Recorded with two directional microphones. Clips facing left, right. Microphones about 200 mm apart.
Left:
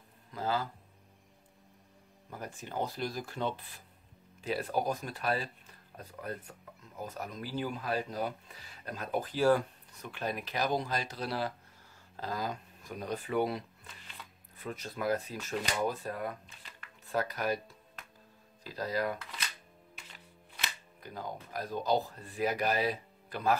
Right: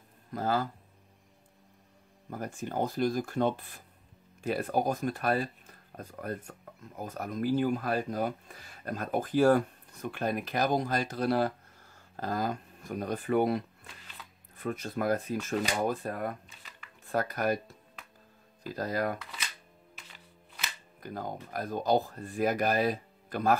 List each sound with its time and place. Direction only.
0.3 s speech: 50° right (ahead or behind)
2.3 s speech: 50° right (ahead or behind)
18.7 s speech: 50° right (ahead or behind)
21.0 s speech: 50° right (ahead or behind)